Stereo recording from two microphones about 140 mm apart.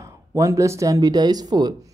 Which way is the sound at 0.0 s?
20° right (ahead or behind).